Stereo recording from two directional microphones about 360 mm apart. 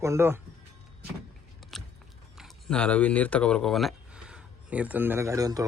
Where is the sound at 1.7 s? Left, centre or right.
Centre.